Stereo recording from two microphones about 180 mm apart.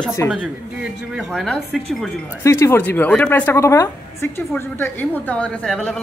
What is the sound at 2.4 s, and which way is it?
A woman's voice, 15° left (ahead or behind).